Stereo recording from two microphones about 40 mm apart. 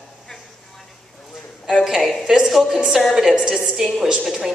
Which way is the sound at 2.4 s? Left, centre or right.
Centre.